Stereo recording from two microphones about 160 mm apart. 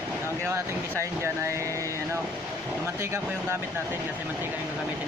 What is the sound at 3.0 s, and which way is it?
Speech, 15° right (ahead or behind).